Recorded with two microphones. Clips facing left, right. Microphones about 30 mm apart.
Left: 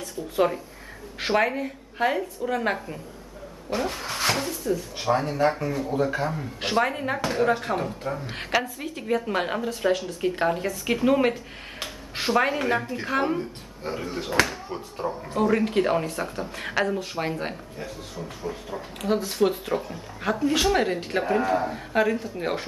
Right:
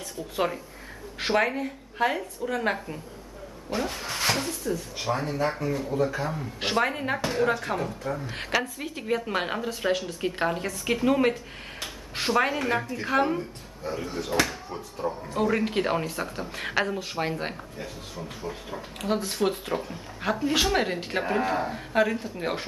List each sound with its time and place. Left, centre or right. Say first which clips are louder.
0.0 s speech: left 4 dB; centre
5.1 s speech: left 5 dB; left
6.6 s speech: left 1 dB; centre
7.6 s speech: left 2 dB; centre
13.9 s speech: left 1 dB; left
14.4 s speech: left 3 dB; centre
15.0 s speech: even; left
15.3 s speech: left 3 dB; centre